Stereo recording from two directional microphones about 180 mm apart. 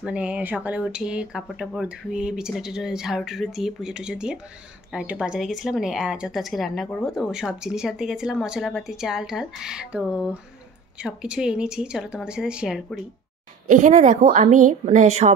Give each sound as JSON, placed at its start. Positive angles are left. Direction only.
{"t": 0.0, "sound": "speech", "side_deg": -5}
{"t": 13.7, "sound": "a woman's voice", "side_deg": -45}